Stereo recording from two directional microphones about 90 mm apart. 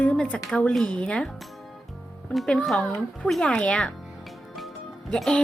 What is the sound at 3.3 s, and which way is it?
Speech, 5° left (ahead or behind).